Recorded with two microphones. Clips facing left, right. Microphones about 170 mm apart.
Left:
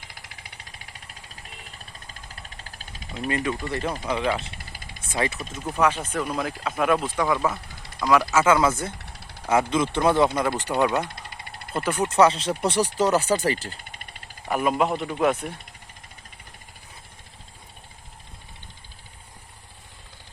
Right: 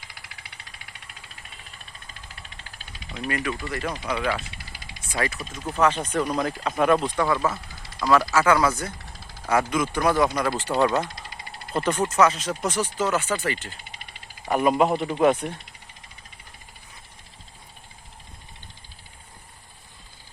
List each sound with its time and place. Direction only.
2.3 s engine: 40° left (ahead or behind)
3.2 s speech: 25° left (ahead or behind)
3.5 s speech: 40° left (ahead or behind)
4.0 s speech: 15° left (ahead or behind)
4.5 s vehicle: 50° left (ahead or behind)
5.1 s speech: 25° left (ahead or behind)
5.4 s speech: 5° left (ahead or behind)
7.4 s a sound: centre (ahead or behind)
8.3 s speech: 20° left (ahead or behind)
12.1 s speech: 30° left (ahead or behind)
13.9 s a sound: 50° left (ahead or behind)
14.5 s speech: centre (ahead or behind)